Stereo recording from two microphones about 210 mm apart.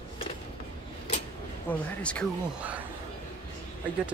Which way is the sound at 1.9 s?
5° left (ahead or behind).